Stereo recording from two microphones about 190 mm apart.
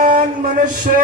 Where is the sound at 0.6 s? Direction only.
45° right (ahead or behind).